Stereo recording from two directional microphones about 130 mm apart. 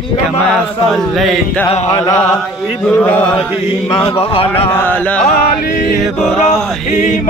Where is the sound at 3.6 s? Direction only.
50° left (ahead or behind).